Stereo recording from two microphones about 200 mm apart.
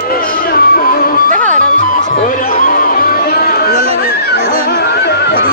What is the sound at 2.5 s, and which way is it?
Music, 45° left (ahead or behind).